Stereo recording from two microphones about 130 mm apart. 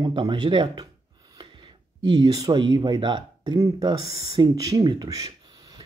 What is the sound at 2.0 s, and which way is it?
Speech, 30° right (ahead or behind).